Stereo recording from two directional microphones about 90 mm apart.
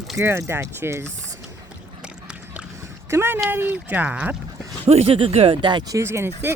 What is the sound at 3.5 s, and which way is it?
Speech, 20° right (ahead or behind).